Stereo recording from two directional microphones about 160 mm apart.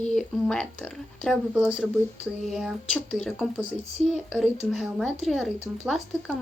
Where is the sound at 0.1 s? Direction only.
5° left (ahead or behind).